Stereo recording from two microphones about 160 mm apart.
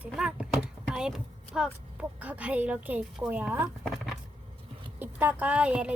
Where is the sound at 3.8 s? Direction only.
Centre (ahead or behind).